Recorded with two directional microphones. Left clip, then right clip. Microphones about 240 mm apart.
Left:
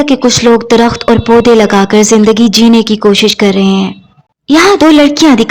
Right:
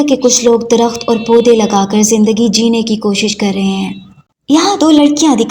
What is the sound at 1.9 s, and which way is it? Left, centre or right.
A woman's voice, left.